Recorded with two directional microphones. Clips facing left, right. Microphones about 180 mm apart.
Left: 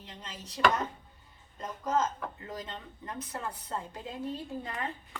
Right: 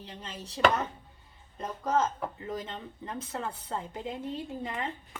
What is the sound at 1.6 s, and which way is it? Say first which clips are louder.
A woman's voice: right 2 dB; 30° right (ahead or behind).